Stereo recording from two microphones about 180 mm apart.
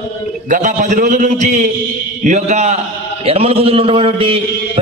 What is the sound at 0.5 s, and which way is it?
A man's voice, 45° right (ahead or behind).